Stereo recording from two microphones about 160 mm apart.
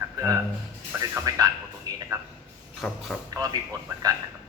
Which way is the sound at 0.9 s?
15° right (ahead or behind).